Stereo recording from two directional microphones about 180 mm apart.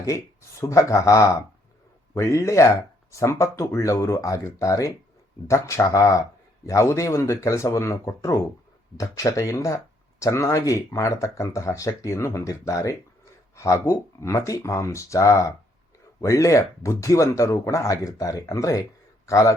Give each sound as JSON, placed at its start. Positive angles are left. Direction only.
{"t": 0.6, "sound": "a man's voice", "side_deg": 15}